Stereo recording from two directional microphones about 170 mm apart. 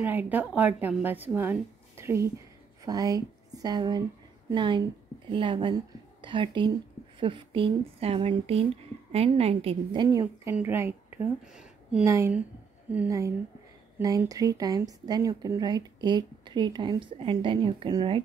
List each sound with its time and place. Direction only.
0.0 s a woman's voice: 10° right (ahead or behind); by 10.0 s 35° right (ahead or behind)
10.2 s a woman's voice: 10° right (ahead or behind)
12.1 s a woman's voice: 15° right (ahead or behind)